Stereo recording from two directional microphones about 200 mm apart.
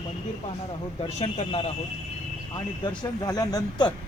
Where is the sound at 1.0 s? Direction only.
30° left (ahead or behind).